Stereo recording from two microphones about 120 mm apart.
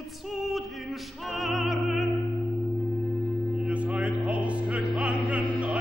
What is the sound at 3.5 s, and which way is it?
Music, 10° right (ahead or behind).